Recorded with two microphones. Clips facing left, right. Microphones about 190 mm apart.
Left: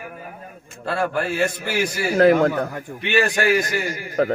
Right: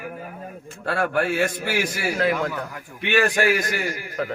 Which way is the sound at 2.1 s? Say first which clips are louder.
Left 10 dB; 45° left (ahead or behind).